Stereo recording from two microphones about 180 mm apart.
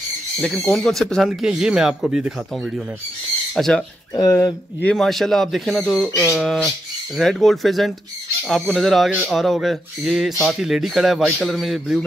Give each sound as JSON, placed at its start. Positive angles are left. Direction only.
{"t": 0.4, "sound": "speech", "side_deg": 0}
{"t": 3.5, "sound": "speech", "side_deg": 5}
{"t": 4.1, "sound": "speech", "side_deg": 20}
{"t": 4.8, "sound": "speech", "side_deg": 0}
{"t": 6.0, "sound": "speech", "side_deg": 15}
{"t": 6.3, "sound": "speech", "side_deg": 0}